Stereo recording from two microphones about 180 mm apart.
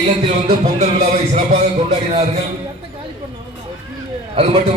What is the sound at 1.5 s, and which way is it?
Speech, 35° right (ahead or behind).